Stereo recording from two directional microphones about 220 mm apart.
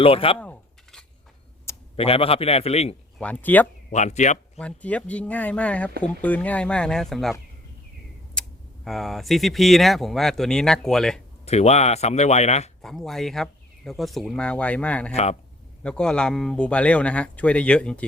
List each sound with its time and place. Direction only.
0.0 s speech: 25° left (ahead or behind)
0.3 s a sound: 5° left (ahead or behind)
2.0 s speech: 25° left (ahead or behind)
3.2 s speech: 5° left (ahead or behind)
3.9 s speech: 30° left (ahead or behind)
4.5 s speech: 5° left (ahead or behind)
8.4 s speech: centre (ahead or behind)
11.4 s speech: 30° left (ahead or behind)
12.8 s speech: centre (ahead or behind)
15.1 s speech: 30° left (ahead or behind)
15.8 s speech: 5° left (ahead or behind)